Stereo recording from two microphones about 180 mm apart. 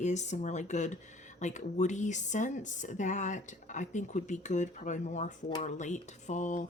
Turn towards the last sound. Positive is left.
turn(degrees=45)  # may be behind; listen again after turning